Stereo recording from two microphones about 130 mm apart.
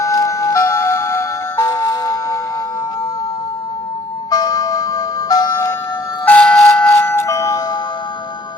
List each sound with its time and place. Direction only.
0.0 s music: 25° left (ahead or behind)
4.3 s music: 30° left (ahead or behind)
6.2 s a sound: 10° left (ahead or behind)
6.9 s music: 15° left (ahead or behind)